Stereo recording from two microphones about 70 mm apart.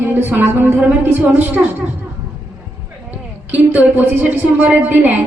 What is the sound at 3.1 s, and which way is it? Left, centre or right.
Speech, right.